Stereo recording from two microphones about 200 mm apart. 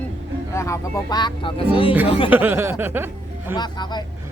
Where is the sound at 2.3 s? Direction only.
10° right (ahead or behind).